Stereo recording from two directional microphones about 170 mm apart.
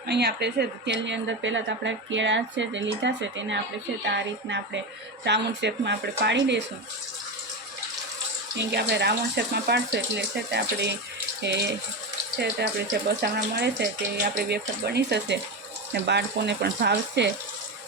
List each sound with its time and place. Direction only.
0.1 s a woman's voice: 75° right (ahead or behind)
8.5 s speech: 80° right